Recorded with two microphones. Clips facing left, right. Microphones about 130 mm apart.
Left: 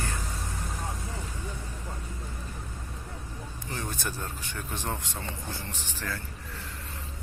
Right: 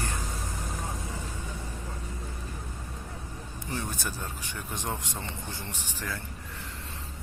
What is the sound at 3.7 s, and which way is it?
Speech, 10° right (ahead or behind).